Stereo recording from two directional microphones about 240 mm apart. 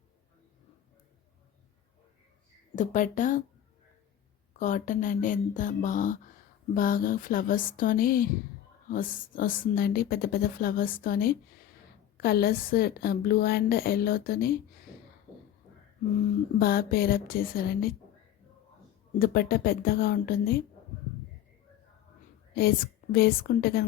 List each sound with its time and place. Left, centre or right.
2.7 s a woman's voice: left
4.6 s a woman's voice: left
16.2 s a woman's voice: left
19.2 s a woman's voice: left
23.1 s a woman's voice: left